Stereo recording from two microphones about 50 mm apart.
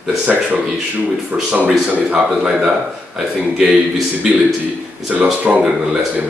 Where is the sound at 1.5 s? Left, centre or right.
Right.